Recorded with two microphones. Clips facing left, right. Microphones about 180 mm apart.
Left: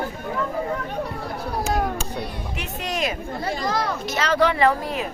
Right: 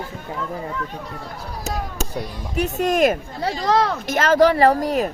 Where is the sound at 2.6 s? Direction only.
45° right (ahead or behind).